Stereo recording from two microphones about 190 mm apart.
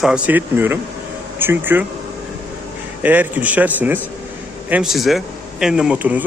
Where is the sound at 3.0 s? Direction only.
10° right (ahead or behind).